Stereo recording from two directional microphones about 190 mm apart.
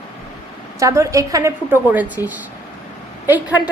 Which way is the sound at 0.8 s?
15° right (ahead or behind).